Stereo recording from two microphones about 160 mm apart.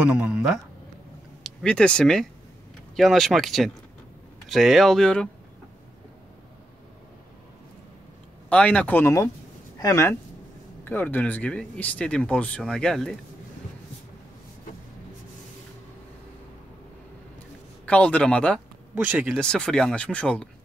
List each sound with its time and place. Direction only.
0.0 s speech: 5° right (ahead or behind)
8.5 s speech: 10° left (ahead or behind)
17.8 s speech: 10° left (ahead or behind)
18.9 s speech: 10° right (ahead or behind)
19.3 s speech: 5° left (ahead or behind)